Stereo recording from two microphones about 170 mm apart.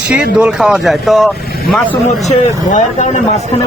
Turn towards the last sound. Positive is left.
turn(degrees=45)  # may be behind; listen again after turning